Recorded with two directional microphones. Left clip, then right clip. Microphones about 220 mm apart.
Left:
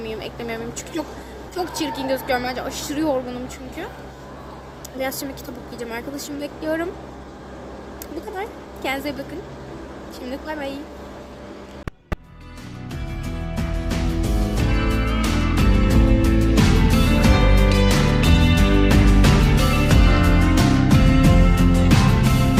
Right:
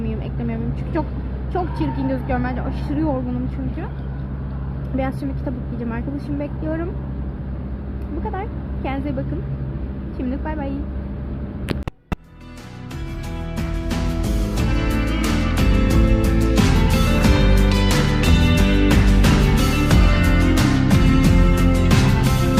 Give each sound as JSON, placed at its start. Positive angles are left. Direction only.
{"t": 0.1, "sound": "a sound", "side_deg": 15}
{"t": 1.8, "sound": "a woman's voice", "side_deg": 20}
{"t": 8.4, "sound": "a woman's voice", "side_deg": 15}
{"t": 13.6, "sound": "music", "side_deg": 0}